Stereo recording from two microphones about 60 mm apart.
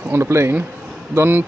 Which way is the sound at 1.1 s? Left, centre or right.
Right.